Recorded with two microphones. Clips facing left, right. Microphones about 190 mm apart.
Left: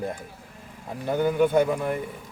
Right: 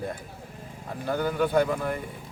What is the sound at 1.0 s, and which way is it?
Speech, 20° left (ahead or behind).